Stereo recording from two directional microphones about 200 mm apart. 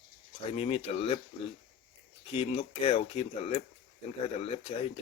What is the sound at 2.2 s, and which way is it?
Speech, 30° left (ahead or behind).